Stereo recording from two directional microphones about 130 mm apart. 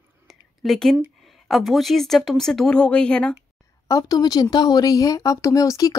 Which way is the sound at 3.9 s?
25° left (ahead or behind).